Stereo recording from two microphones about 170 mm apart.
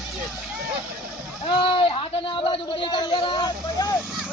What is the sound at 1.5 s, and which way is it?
A man's voice, 30° left (ahead or behind).